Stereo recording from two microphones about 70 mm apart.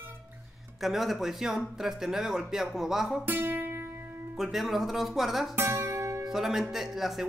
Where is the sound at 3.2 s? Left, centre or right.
Right.